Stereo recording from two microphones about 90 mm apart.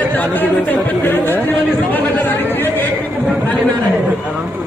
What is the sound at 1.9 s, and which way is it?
Chatter, 20° left (ahead or behind).